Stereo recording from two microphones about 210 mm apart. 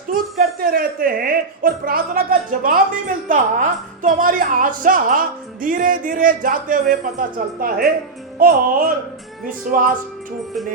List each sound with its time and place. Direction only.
0.1 s a woman's voice: 45° right (ahead or behind)
8.4 s music: 40° right (ahead or behind)
9.7 s a woman's voice: 40° right (ahead or behind)